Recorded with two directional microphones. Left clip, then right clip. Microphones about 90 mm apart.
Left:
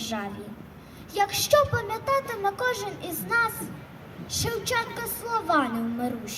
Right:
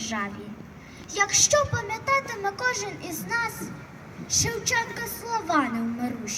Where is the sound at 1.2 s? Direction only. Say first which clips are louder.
Even; 10° left (ahead or behind).